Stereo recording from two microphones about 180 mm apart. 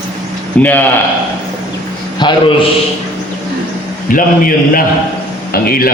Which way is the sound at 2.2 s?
25° left (ahead or behind).